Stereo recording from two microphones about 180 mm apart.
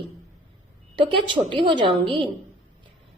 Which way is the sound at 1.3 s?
25° right (ahead or behind).